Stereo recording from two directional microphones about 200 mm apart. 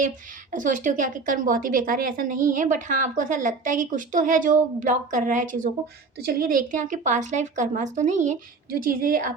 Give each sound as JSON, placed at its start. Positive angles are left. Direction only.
{"t": 0.5, "sound": "speech", "side_deg": -40}